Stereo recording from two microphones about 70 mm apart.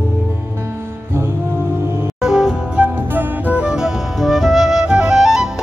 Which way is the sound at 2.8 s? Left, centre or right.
Right.